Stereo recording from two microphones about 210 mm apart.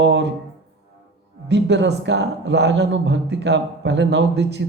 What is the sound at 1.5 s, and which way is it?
Speech, 55° right (ahead or behind).